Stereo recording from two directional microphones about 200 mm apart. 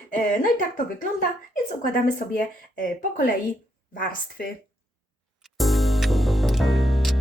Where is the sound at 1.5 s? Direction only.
45° left (ahead or behind).